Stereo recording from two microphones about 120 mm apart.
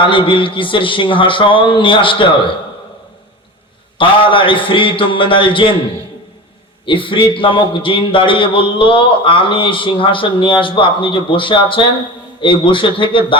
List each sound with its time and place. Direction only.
0.0 s a man's voice: 45° left (ahead or behind)
3.9 s a man's voice: 45° left (ahead or behind)
6.8 s a man's voice: 45° left (ahead or behind)